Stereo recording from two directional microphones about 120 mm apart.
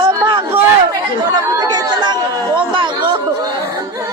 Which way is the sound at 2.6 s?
45° right (ahead or behind).